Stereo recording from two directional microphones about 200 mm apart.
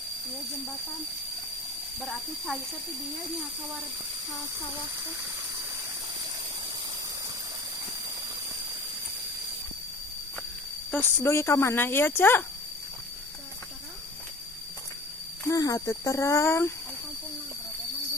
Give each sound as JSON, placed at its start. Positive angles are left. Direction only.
{"t": 2.0, "sound": "speech", "side_deg": 0}
{"t": 10.9, "sound": "speech", "side_deg": 10}
{"t": 15.4, "sound": "speech", "side_deg": 15}